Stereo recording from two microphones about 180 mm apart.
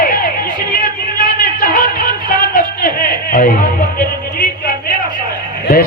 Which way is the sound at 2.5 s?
50° left (ahead or behind).